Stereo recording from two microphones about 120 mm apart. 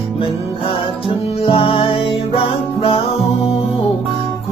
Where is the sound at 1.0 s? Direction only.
50° left (ahead or behind).